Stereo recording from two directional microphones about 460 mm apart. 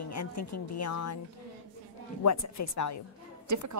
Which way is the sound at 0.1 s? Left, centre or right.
Left.